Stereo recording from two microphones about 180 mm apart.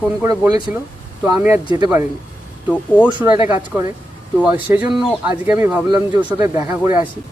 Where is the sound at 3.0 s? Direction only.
10° right (ahead or behind).